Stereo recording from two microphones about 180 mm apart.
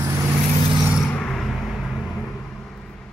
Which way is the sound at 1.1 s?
5° left (ahead or behind).